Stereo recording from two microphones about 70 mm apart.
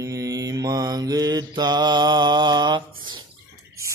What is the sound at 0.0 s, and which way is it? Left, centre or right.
Mantra, right.